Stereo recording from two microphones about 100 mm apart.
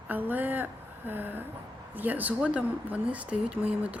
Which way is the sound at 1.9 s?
15° right (ahead or behind).